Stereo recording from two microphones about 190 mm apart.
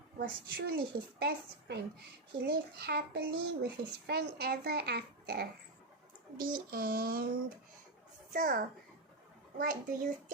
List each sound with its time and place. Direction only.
0.2 s child singing: 50° right (ahead or behind)
1.2 s a child's voice: 60° right (ahead or behind)
6.4 s child singing: 50° right (ahead or behind)
8.3 s a child's voice: 45° right (ahead or behind)
9.6 s child singing: 45° right (ahead or behind)